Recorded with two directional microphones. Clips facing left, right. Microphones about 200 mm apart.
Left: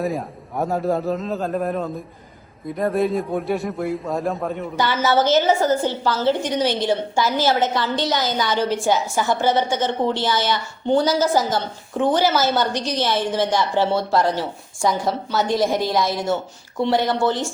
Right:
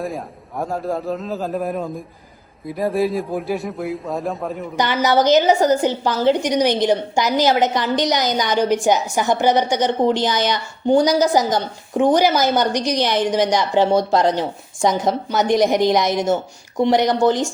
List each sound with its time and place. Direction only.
0.0 s a man's voice: centre (ahead or behind)
4.8 s a woman's voice: 15° right (ahead or behind)